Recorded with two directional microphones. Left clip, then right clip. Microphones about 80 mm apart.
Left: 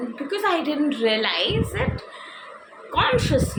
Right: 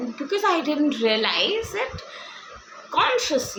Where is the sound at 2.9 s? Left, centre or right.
Right.